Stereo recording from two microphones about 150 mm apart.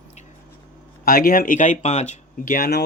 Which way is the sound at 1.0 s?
75° left (ahead or behind).